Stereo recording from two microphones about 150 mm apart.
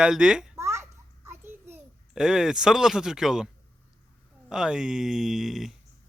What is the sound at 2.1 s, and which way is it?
Speech, 5° right (ahead or behind).